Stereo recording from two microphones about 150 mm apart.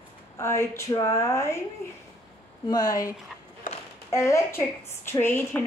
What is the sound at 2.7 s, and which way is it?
A woman's voice, 25° left (ahead or behind).